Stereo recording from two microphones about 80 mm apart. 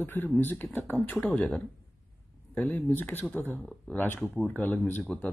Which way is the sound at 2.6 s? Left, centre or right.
Left.